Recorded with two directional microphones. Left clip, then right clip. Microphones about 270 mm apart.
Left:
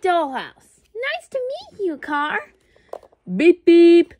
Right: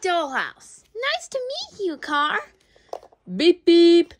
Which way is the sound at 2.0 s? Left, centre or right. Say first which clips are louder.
Right 2 dB; centre.